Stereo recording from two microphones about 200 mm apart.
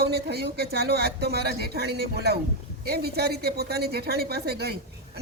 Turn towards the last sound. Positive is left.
turn(degrees=-55)  # may be behind; listen again after turning